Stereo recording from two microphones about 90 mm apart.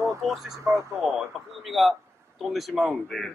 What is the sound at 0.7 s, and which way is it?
Speech, 30° right (ahead or behind).